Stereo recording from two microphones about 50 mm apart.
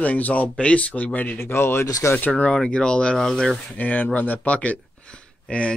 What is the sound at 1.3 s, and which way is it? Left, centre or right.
Speech, left.